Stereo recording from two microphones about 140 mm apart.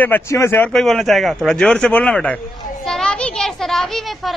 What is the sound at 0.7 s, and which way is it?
A child's voice, centre (ahead or behind).